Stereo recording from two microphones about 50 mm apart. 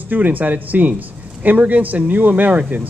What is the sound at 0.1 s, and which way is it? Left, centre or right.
A man's voice, right.